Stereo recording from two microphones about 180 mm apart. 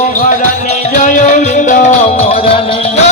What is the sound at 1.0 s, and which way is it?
Music, 45° left (ahead or behind).